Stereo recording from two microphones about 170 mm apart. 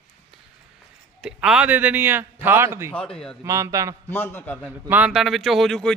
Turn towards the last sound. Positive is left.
turn(degrees=5)  # may be behind; listen again after turning